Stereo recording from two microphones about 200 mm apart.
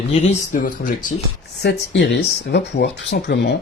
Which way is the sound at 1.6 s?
55° left (ahead or behind).